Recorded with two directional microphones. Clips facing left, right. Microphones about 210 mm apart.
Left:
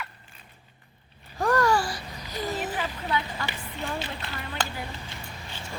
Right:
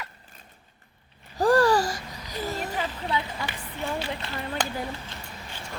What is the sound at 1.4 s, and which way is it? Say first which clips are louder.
Babbling: right 3 dB; 30° right (ahead or behind).